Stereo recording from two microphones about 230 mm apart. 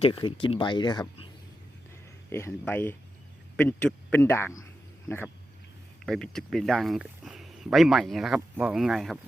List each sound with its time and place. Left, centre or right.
0.0 s speech: left
2.3 s speech: centre